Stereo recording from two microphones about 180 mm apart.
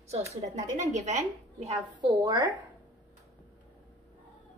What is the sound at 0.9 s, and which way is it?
Speech, 40° right (ahead or behind).